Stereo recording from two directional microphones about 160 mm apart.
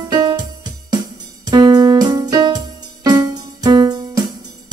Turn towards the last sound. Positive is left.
turn(degrees=-25)  # may be behind; listen again after turning